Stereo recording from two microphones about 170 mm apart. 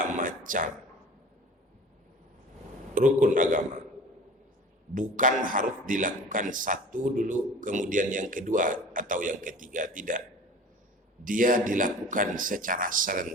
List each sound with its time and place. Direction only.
0.0 s a sound: 55° right (ahead or behind)
2.9 s a man's voice: 50° right (ahead or behind)
4.9 s a man's voice: 50° right (ahead or behind)
11.3 s a man's voice: 50° right (ahead or behind)